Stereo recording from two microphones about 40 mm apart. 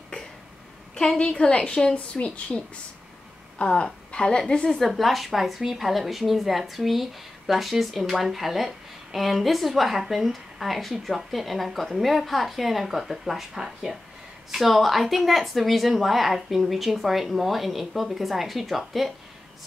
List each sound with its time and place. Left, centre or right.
0.9 s a woman's voice: left
2.1 s a woman's voice: left; by 4.7 s centre
4.7 s a woman's voice: centre